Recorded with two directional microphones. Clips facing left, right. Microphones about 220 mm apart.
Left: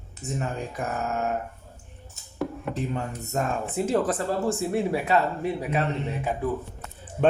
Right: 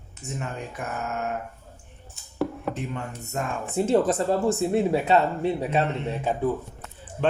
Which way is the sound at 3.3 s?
40° left (ahead or behind).